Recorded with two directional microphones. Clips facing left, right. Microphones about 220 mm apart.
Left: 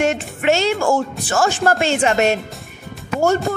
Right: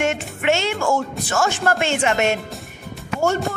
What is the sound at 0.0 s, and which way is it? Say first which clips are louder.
Speech: left 3 dB; 35° left (ahead or behind).